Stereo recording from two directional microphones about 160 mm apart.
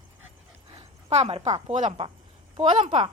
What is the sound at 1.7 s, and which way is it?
Speech, 45° right (ahead or behind).